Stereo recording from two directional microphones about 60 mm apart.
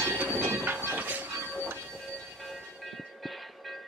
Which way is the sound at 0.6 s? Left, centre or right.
Right.